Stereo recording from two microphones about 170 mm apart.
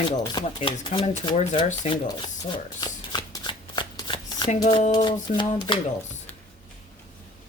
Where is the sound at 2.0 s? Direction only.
25° left (ahead or behind).